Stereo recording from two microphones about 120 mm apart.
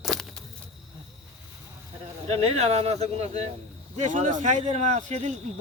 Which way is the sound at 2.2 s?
55° right (ahead or behind).